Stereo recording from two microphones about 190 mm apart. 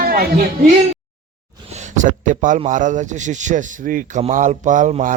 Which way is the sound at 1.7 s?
40° right (ahead or behind).